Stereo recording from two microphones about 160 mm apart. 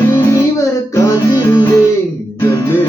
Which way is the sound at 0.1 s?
20° left (ahead or behind).